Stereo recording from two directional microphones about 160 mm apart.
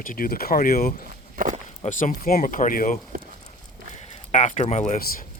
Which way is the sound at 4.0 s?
45° left (ahead or behind).